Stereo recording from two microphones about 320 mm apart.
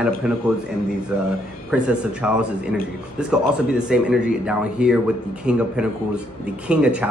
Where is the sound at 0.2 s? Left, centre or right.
Centre.